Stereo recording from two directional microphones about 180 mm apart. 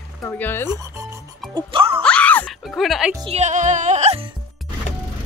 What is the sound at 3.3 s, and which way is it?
Music, 40° right (ahead or behind).